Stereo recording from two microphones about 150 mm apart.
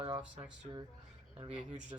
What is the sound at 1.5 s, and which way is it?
Speech, 10° right (ahead or behind).